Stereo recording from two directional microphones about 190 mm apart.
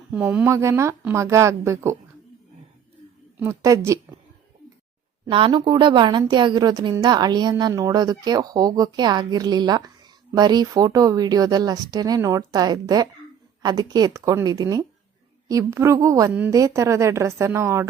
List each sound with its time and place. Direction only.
0.1 s speech: 10° right (ahead or behind)
3.4 s speech: 15° right (ahead or behind)
5.2 s a woman's voice: 25° right (ahead or behind)